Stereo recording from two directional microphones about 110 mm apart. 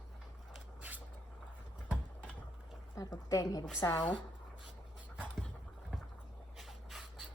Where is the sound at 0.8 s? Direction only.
15° right (ahead or behind).